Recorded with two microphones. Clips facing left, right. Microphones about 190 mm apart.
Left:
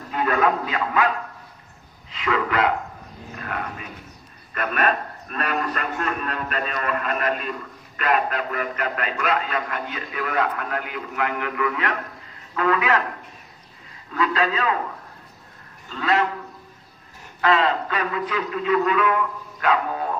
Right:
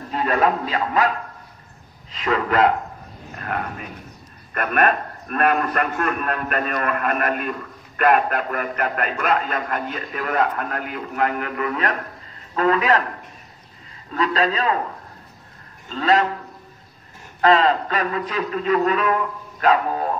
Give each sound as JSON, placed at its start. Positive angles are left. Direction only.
{"t": 0.1, "sound": "a man's voice", "side_deg": -30}
{"t": 2.1, "sound": "a man's voice", "side_deg": -40}
{"t": 14.1, "sound": "a man's voice", "side_deg": -35}
{"t": 15.9, "sound": "a man's voice", "side_deg": -35}
{"t": 17.4, "sound": "a man's voice", "side_deg": -40}